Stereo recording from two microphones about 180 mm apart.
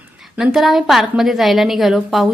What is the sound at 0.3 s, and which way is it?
A woman's voice, centre (ahead or behind).